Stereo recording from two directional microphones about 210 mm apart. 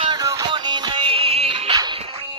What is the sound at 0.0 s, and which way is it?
Music, 20° right (ahead or behind).